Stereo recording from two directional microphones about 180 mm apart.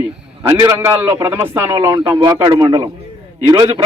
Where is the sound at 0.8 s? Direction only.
15° right (ahead or behind).